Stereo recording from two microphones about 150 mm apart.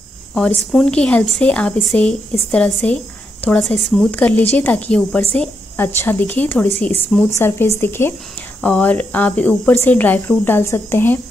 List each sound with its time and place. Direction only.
0.3 s speech: 5° left (ahead or behind)